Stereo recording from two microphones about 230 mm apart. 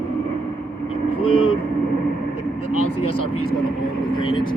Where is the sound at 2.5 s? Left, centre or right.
Left.